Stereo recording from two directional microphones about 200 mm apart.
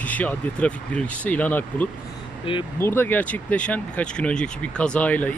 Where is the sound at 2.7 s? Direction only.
10° left (ahead or behind).